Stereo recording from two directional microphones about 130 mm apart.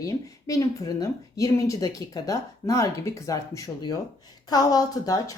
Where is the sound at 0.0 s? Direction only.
25° left (ahead or behind).